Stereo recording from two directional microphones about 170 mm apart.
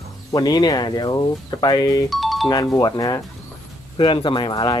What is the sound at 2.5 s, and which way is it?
Speech, 20° left (ahead or behind).